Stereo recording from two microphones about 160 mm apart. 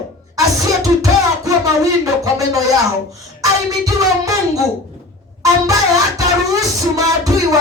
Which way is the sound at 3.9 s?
20° right (ahead or behind).